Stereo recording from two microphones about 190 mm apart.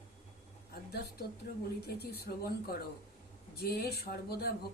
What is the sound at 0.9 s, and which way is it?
Speech, 55° left (ahead or behind).